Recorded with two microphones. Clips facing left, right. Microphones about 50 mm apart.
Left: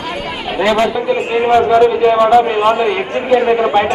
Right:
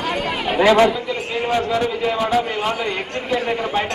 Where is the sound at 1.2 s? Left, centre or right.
Left.